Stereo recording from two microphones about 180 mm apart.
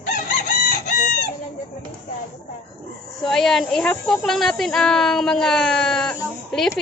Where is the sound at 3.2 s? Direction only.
Centre (ahead or behind).